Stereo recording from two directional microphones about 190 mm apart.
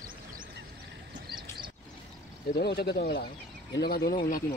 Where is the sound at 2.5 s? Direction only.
60° left (ahead or behind).